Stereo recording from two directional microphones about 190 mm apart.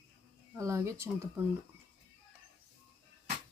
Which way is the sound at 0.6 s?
15° right (ahead or behind).